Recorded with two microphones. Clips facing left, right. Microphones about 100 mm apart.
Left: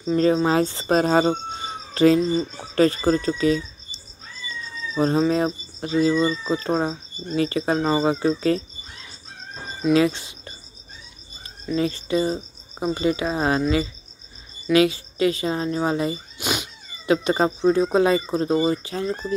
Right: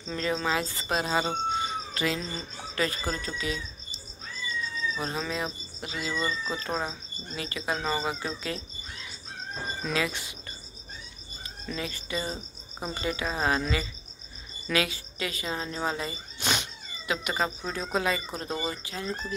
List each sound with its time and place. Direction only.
0.1 s speech: 30° left (ahead or behind)
0.9 s speech: 45° left (ahead or behind)
2.0 s speech: 30° left (ahead or behind)
4.9 s speech: 35° left (ahead or behind)
9.9 s speech: 30° left (ahead or behind)
11.6 s cricket: 30° left (ahead or behind)
16.3 s cat: 10° left (ahead or behind)
17.0 s cricket: 30° left (ahead or behind)